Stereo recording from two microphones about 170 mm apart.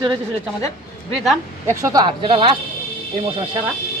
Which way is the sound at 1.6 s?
15° right (ahead or behind).